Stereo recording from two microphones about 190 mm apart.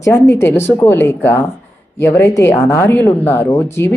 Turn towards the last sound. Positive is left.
turn(degrees=15)  # may be behind; listen again after turning